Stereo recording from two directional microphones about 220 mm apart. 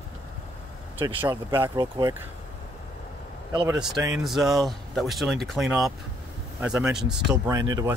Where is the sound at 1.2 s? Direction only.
10° right (ahead or behind).